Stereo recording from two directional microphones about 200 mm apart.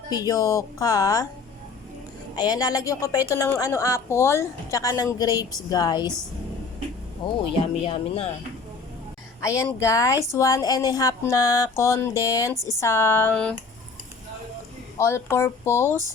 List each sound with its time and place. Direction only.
0.1 s a woman's voice: 15° left (ahead or behind)
2.3 s a woman's voice: 20° left (ahead or behind)
7.2 s speech: 25° left (ahead or behind)
9.4 s a woman's voice: 15° left (ahead or behind)
14.9 s a woman's voice: 15° left (ahead or behind)